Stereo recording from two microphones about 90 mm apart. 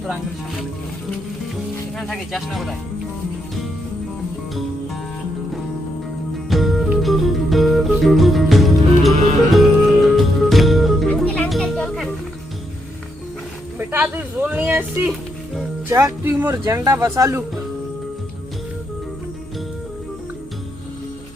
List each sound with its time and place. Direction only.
0.0 s speech: centre (ahead or behind)
2.0 s speech: 5° left (ahead or behind)
6.5 s music: centre (ahead or behind)
13.7 s speech: 25° right (ahead or behind)
15.9 s speech: 30° right (ahead or behind)